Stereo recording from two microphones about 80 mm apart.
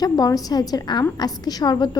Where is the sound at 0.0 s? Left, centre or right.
Left.